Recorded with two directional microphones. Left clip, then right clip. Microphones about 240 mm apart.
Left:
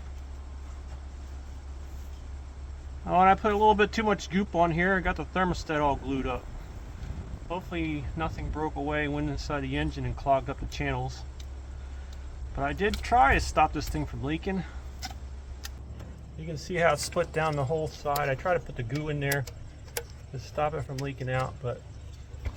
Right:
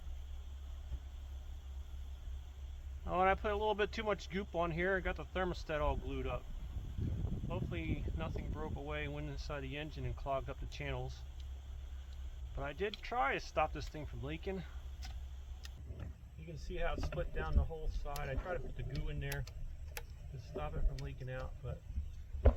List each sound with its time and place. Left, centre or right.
3.1 s speech: right
7.5 s speech: right
12.5 s speech: right
16.6 s speech: centre
20.6 s speech: centre